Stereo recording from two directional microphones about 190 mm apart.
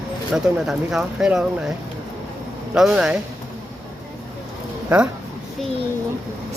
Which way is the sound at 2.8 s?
5° right (ahead or behind).